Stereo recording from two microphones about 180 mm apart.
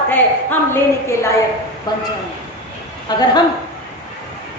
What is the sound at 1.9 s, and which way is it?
Speech, 20° left (ahead or behind).